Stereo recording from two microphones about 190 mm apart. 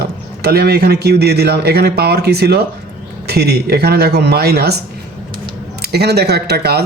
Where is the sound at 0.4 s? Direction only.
55° right (ahead or behind).